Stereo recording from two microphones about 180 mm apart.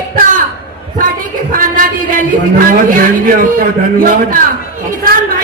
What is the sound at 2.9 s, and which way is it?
Speech, 50° right (ahead or behind).